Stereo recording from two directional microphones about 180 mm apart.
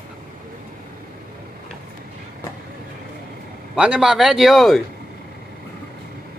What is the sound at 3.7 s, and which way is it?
A man's voice, 5° right (ahead or behind).